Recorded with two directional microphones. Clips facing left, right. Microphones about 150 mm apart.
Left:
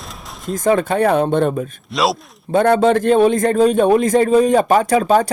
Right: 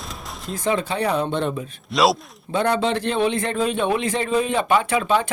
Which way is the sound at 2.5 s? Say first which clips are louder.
Left 8 dB; 50° left (ahead or behind).